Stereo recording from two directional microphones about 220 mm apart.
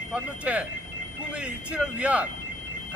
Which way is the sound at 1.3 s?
5° right (ahead or behind).